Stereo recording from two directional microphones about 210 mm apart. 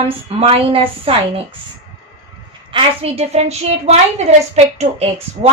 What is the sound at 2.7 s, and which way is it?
A woman's voice, 25° right (ahead or behind).